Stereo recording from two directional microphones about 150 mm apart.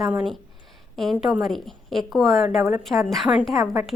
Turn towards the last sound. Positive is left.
turn(degrees=-20)  # may be behind; listen again after turning